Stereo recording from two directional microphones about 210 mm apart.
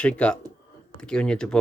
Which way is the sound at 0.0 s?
5° left (ahead or behind).